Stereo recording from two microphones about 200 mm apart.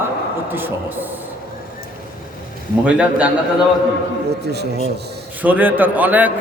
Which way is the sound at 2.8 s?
5° right (ahead or behind).